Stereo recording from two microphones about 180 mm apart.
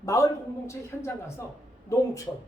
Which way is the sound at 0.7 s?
15° left (ahead or behind).